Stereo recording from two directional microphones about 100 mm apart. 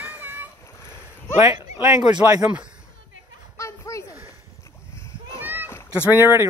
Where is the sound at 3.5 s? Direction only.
30° left (ahead or behind).